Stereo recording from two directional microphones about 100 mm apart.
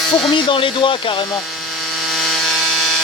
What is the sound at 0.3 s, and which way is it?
Speech, 55° left (ahead or behind).